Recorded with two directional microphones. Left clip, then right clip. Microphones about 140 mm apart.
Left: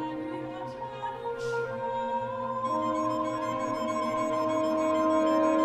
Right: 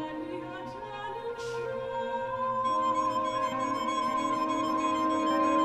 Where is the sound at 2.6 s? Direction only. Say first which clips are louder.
Right 1 dB; centre (ahead or behind).